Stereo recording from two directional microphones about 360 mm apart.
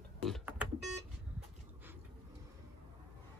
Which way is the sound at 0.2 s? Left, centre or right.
Centre.